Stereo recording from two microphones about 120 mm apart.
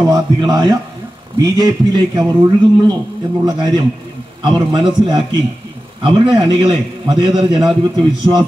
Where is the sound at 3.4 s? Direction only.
35° right (ahead or behind).